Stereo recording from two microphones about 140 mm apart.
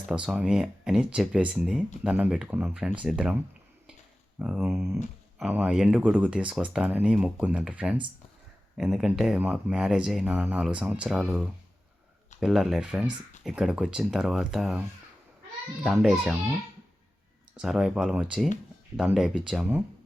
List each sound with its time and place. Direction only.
0.1 s speech: 5° right (ahead or behind)
4.4 s speech: 10° right (ahead or behind)
17.6 s speech: 5° right (ahead or behind)